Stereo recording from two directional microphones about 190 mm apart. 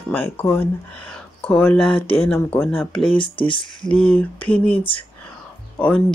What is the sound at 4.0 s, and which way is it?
Speech, 10° left (ahead or behind).